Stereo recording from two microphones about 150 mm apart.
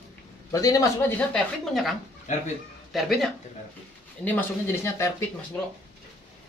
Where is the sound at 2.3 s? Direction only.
55° left (ahead or behind).